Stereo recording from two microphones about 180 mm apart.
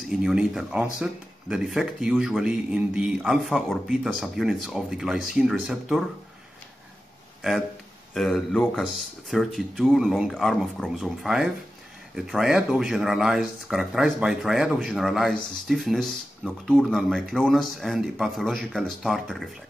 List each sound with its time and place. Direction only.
0.1 s speech: centre (ahead or behind)
8.1 s speech: centre (ahead or behind)